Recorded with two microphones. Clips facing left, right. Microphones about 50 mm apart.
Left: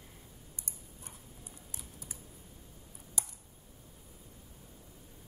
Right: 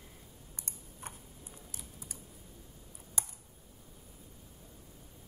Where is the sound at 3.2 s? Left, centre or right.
Right.